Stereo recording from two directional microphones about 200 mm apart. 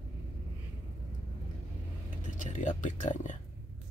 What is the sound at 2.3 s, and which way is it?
Speech, 40° left (ahead or behind).